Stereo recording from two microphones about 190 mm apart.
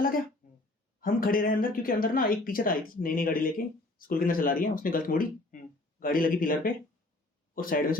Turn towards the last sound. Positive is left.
turn(degrees=50)  # may be behind; listen again after turning